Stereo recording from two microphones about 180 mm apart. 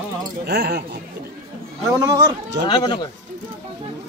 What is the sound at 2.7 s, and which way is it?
Speech, 25° left (ahead or behind).